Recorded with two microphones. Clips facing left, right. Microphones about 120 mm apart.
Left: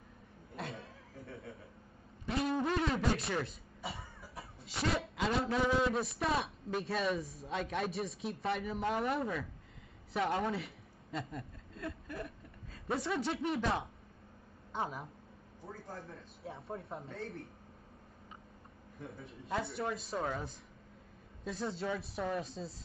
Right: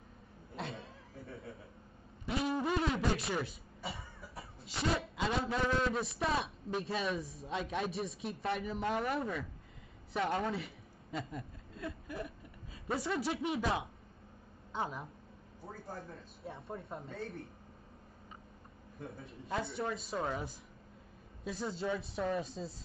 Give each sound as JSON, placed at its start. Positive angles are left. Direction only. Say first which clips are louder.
{"t": 0.6, "sound": "chuckle", "louder": "right 1 dB", "side_deg": -25}
{"t": 2.2, "sound": "a sound", "louder": "left 1 dB", "side_deg": -5}
{"t": 4.6, "sound": "a man's voice", "louder": "even", "side_deg": 0}
{"t": 15.6, "sound": "a man's voice", "louder": "right 1 dB", "side_deg": -25}
{"t": 16.4, "sound": "a man's voice", "louder": "left 1 dB", "side_deg": 0}
{"t": 19.1, "sound": "a man's voice", "louder": "left 1 dB", "side_deg": 0}